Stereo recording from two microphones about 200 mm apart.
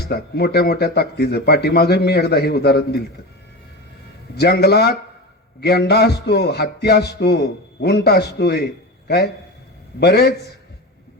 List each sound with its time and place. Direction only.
0.1 s a man's voice: 55° left (ahead or behind)
4.4 s a sound: 55° left (ahead or behind)
8.4 s a man's voice: 55° left (ahead or behind)